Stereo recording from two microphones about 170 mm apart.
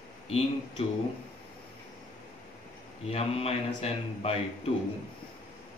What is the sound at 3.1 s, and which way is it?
Speech, 35° left (ahead or behind).